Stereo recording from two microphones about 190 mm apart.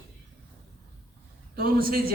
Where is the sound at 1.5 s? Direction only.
50° right (ahead or behind).